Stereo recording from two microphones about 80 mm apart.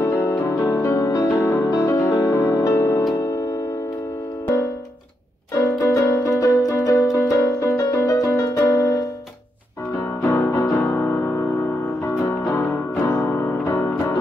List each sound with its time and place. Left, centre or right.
0.0 s music: left
1.4 s music: left
5.8 s music: left
10.8 s music: left
12.5 s music: left
13.7 s music: left